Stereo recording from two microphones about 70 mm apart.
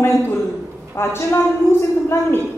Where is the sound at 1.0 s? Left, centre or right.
Left.